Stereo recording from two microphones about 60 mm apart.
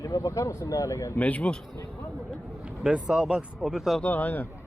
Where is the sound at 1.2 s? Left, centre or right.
Left.